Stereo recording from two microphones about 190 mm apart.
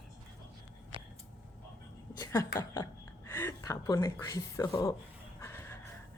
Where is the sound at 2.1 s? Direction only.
20° left (ahead or behind).